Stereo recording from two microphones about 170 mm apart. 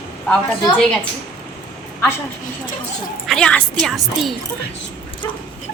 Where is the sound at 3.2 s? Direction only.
5° left (ahead or behind).